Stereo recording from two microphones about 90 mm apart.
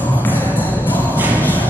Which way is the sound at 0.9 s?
20° right (ahead or behind).